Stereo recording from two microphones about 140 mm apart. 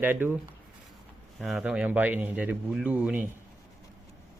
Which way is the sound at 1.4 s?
Centre (ahead or behind).